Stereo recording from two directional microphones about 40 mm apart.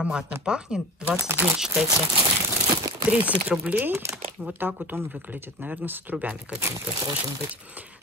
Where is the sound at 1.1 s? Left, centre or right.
Right.